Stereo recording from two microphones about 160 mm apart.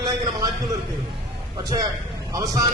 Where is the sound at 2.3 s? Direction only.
20° right (ahead or behind).